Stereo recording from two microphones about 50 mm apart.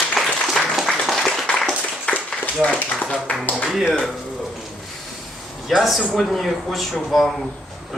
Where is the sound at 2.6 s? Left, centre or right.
Left.